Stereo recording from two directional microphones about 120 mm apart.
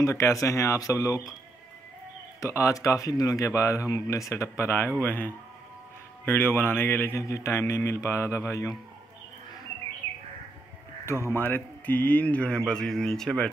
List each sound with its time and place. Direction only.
0.0 s speech: 25° left (ahead or behind)
2.4 s speech: 25° left (ahead or behind)
11.1 s speech: 20° left (ahead or behind); by 13.5 s 5° left (ahead or behind)